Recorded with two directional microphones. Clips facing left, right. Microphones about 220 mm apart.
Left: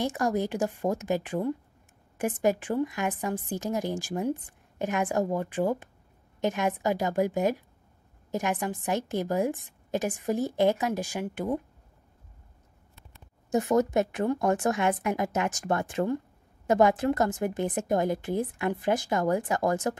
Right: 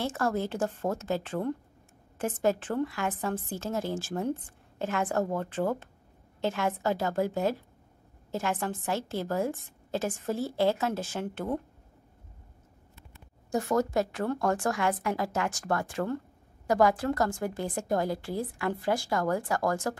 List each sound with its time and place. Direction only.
0.0 s a woman's voice: 15° left (ahead or behind)
13.5 s a woman's voice: 20° left (ahead or behind)